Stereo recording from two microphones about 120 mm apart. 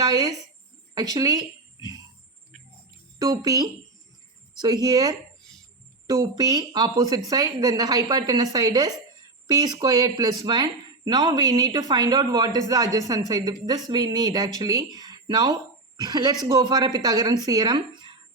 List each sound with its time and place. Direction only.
0.0 s speech: 30° right (ahead or behind)
3.2 s speech: 30° right (ahead or behind)